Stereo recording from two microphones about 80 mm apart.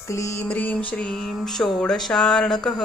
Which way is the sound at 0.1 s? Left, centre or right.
Left.